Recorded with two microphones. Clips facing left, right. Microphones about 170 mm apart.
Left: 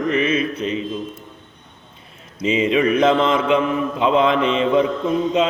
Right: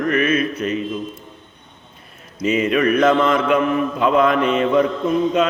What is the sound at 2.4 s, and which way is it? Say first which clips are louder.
Mantra: even; 25° left (ahead or behind).